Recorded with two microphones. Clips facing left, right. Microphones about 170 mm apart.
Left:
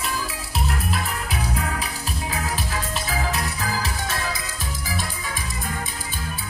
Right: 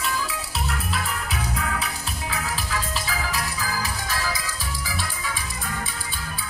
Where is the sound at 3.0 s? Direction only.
55° left (ahead or behind).